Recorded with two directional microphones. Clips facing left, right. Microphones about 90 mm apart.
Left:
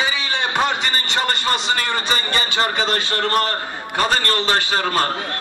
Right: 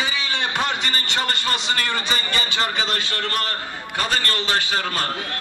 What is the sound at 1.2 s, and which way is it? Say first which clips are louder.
Music: left 5 dB; 35° left (ahead or behind).